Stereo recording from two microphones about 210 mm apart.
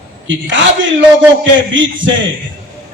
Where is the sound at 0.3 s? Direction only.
60° right (ahead or behind).